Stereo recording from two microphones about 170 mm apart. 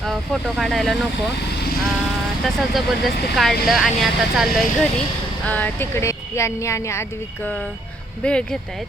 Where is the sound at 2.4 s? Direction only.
Centre (ahead or behind).